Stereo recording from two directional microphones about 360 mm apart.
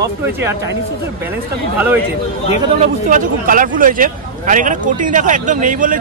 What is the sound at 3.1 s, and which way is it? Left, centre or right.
A man's voice, right.